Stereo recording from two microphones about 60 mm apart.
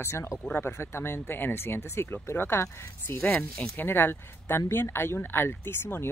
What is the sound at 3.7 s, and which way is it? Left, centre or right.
Speech, left.